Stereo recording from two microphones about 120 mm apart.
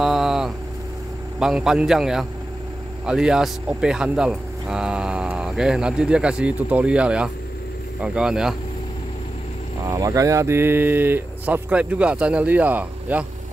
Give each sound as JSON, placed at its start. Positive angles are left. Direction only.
{"t": 0.0, "sound": "vehicle", "side_deg": 0}
{"t": 1.4, "sound": "a man's voice", "side_deg": -5}
{"t": 9.8, "sound": "speech", "side_deg": -30}